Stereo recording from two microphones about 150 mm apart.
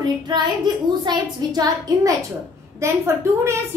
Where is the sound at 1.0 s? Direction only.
25° right (ahead or behind).